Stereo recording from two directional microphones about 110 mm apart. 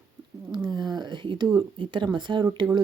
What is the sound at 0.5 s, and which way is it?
Speech, 40° right (ahead or behind).